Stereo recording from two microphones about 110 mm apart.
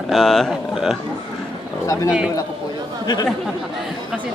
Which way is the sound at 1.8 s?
30° left (ahead or behind).